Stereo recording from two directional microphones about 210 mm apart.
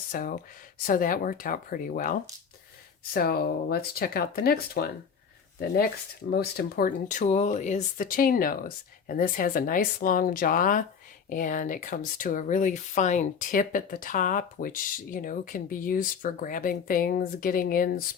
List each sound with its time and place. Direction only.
0.1 s speech: 40° left (ahead or behind)